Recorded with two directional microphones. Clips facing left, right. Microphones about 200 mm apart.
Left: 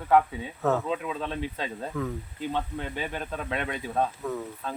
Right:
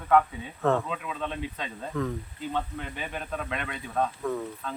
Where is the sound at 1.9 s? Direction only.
5° left (ahead or behind).